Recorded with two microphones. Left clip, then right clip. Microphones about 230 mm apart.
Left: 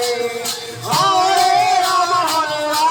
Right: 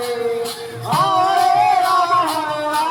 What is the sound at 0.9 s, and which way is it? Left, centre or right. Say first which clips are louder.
Music: left 1 dB; left.